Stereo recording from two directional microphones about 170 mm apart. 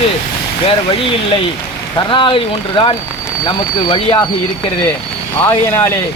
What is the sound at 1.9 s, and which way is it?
Speech, 30° left (ahead or behind).